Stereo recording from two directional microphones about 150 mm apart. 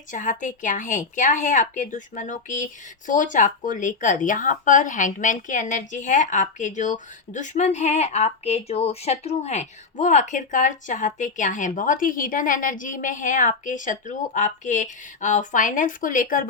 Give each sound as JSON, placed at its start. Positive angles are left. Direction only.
{"t": 0.1, "sound": "speech", "side_deg": 60}